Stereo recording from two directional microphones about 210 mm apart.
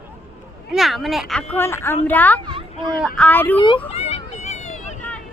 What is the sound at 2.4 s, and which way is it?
Speech, 25° right (ahead or behind).